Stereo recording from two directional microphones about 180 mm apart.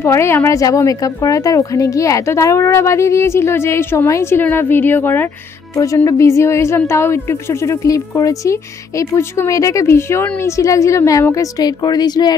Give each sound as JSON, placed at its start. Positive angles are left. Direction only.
{"t": 0.0, "sound": "a woman's voice", "side_deg": 15}